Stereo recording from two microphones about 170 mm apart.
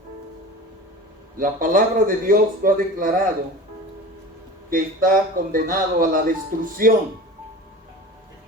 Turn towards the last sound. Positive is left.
turn(degrees=-55)  # may be behind; listen again after turning